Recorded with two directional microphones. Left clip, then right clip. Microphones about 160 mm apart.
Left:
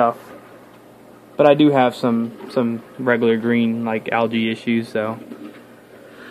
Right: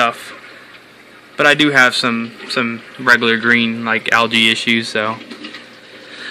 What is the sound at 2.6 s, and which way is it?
Speech, centre (ahead or behind).